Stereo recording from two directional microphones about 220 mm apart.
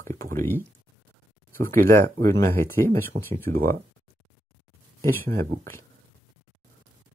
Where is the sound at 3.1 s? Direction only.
40° right (ahead or behind).